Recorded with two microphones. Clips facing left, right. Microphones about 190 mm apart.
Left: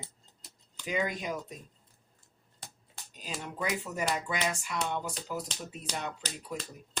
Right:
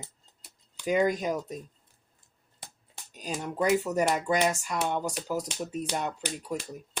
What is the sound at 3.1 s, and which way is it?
Speech, 45° right (ahead or behind).